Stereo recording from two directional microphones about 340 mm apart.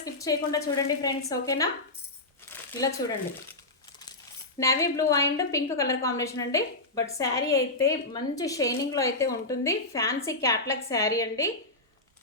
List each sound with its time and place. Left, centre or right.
0.0 s a woman's voice: centre
2.5 s crumpling: centre
4.6 s a woman's voice: centre